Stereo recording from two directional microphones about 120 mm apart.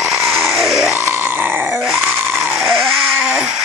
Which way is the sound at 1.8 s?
5° right (ahead or behind).